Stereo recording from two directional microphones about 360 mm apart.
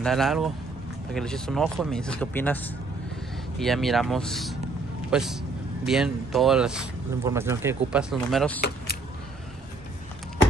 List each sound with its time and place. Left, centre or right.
0.0 s speech: centre
8.5 s keys jangling: left